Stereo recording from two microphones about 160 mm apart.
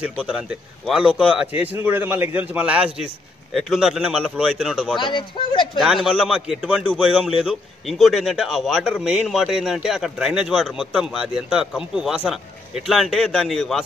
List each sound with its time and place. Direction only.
0.2 s a man's voice: 5° right (ahead or behind)
4.9 s speech: 30° left (ahead or behind)
6.2 s speech: 5° right (ahead or behind)